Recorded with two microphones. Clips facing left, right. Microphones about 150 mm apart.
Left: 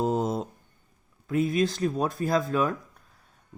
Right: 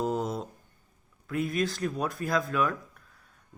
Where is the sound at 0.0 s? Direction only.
45° left (ahead or behind).